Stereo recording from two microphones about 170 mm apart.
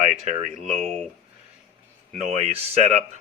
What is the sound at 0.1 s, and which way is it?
Speech, 35° right (ahead or behind).